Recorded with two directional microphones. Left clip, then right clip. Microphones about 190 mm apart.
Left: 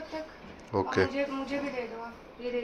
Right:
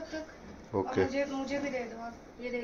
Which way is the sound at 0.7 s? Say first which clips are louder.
Left 3 dB; centre (ahead or behind).